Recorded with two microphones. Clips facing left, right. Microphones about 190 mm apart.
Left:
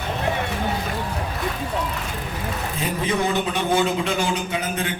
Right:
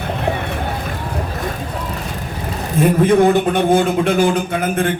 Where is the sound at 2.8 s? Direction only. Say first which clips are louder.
Right 12 dB; 55° right (ahead or behind).